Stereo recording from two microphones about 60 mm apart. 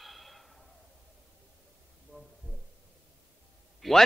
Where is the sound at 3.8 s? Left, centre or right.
Centre.